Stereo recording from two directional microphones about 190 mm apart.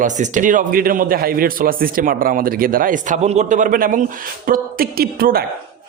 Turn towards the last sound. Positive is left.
turn(degrees=-50)  # may be behind; listen again after turning